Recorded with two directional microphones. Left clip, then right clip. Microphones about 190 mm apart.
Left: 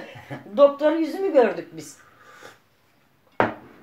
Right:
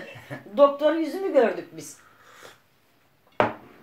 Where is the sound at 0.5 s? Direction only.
15° left (ahead or behind).